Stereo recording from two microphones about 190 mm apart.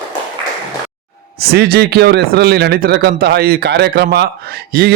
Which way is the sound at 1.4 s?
55° right (ahead or behind).